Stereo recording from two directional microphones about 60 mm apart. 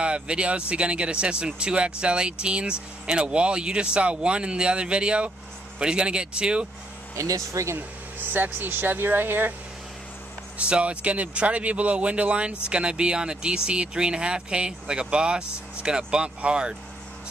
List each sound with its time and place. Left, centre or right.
0.0 s speech: centre
7.2 s speech: right
7.7 s speech: right
10.7 s speech: centre